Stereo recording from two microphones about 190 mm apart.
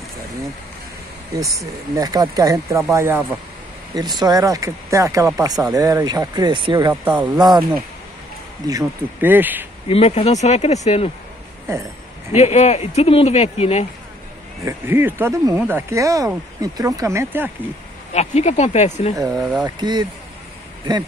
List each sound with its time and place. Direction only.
1.3 s speech: 15° right (ahead or behind)
8.6 s speech: 15° right (ahead or behind)
9.8 s speech: 30° left (ahead or behind)
12.4 s speech: 35° left (ahead or behind)
14.6 s speech: 15° right (ahead or behind)
18.1 s speech: 35° left (ahead or behind)
19.3 s speech: centre (ahead or behind)
19.6 s speech: 20° right (ahead or behind)